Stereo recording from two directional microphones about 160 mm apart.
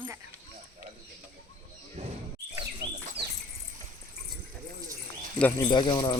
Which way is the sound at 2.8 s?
25° right (ahead or behind).